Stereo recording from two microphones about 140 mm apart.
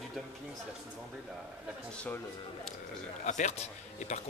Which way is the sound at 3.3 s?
60° left (ahead or behind).